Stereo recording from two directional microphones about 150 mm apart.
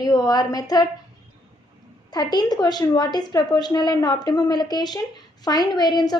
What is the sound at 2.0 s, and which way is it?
A woman's voice, 30° left (ahead or behind).